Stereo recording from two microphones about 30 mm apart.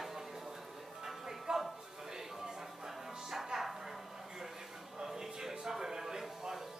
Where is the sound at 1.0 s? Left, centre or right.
Centre.